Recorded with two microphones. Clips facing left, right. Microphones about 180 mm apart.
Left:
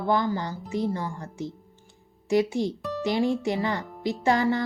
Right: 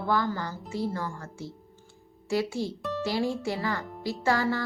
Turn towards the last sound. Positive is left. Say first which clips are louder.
# left 3 dB
turn(degrees=20)  # may be behind; listen again after turning